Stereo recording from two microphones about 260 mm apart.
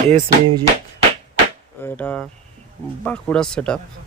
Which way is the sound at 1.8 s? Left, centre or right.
Centre.